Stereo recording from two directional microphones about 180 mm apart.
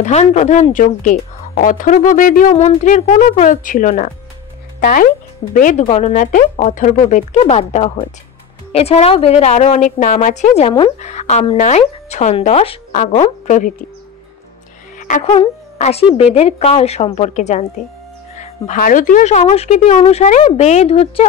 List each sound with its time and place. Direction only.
0.0 s speech: 40° left (ahead or behind)
15.0 s music: 45° left (ahead or behind)
15.2 s a woman's voice: 35° left (ahead or behind)
18.3 s music: 40° left (ahead or behind)
18.8 s speech: 50° left (ahead or behind)